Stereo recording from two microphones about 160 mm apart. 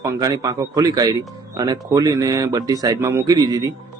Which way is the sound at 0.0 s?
20° right (ahead or behind).